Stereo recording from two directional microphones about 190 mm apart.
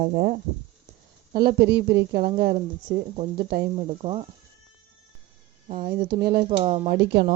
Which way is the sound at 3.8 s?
30° right (ahead or behind).